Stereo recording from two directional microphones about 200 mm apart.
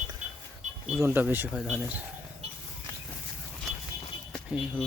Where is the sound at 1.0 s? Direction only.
10° right (ahead or behind).